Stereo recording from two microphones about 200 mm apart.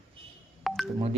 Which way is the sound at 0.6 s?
Centre (ahead or behind).